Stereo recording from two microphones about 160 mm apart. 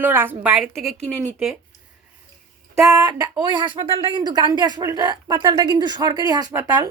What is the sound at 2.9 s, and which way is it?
Speech, 25° right (ahead or behind).